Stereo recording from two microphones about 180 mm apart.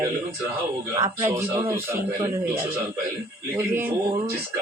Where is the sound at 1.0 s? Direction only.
15° right (ahead or behind).